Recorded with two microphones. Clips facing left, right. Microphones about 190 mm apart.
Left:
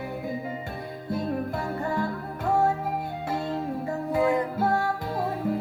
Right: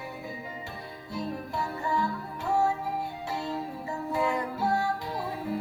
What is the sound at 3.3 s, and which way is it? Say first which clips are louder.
Music: left 7 dB; 50° left (ahead or behind).